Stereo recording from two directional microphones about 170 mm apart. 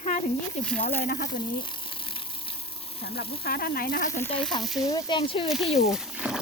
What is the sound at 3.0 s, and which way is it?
Speech, 70° left (ahead or behind).